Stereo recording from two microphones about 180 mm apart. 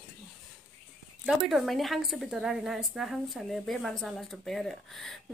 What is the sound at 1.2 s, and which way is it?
A woman's voice, centre (ahead or behind).